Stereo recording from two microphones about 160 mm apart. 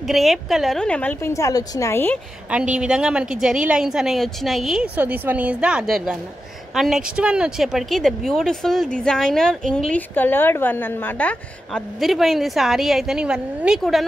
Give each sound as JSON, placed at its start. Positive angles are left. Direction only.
{"t": 0.0, "sound": "speech", "side_deg": 0}
{"t": 1.3, "sound": "a woman's voice", "side_deg": 20}
{"t": 2.5, "sound": "a woman's voice", "side_deg": -5}